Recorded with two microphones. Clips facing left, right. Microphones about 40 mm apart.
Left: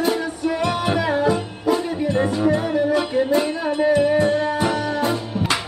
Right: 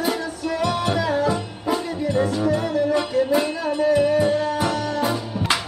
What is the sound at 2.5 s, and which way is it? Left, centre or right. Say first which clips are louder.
Music: left 2 dB; left.